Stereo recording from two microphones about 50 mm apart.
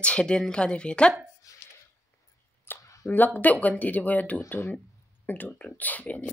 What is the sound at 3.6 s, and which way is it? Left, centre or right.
A woman's voice, left.